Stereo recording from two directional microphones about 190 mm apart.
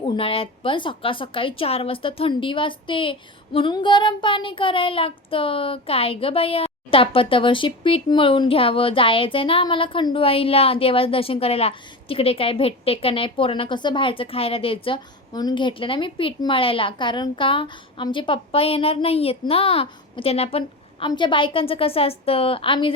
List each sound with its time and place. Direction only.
0.0 s a woman's voice: 30° left (ahead or behind)